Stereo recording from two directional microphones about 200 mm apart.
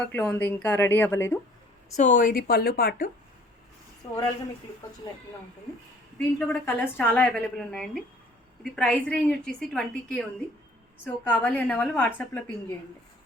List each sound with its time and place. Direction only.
0.0 s a woman's voice: 5° left (ahead or behind)
2.0 s speech: 40° left (ahead or behind)
4.0 s speech: 20° left (ahead or behind)
6.1 s a woman's voice: 5° left (ahead or behind)